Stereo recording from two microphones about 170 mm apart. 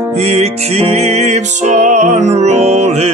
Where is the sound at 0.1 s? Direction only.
40° right (ahead or behind).